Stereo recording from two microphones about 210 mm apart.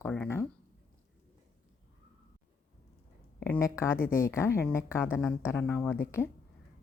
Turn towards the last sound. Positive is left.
turn(degrees=10)  # may be behind; listen again after turning